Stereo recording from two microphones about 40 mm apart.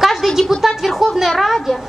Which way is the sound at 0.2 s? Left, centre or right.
Centre.